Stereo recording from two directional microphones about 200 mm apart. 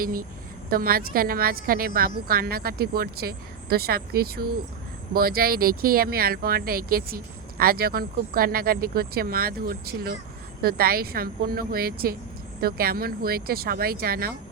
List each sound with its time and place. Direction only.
0.0 s a woman's voice: 45° right (ahead or behind)